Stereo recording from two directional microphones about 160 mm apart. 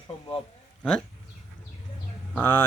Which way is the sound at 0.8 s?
5° left (ahead or behind).